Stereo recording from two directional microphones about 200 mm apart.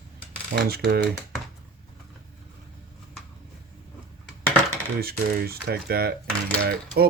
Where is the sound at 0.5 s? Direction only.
50° right (ahead or behind).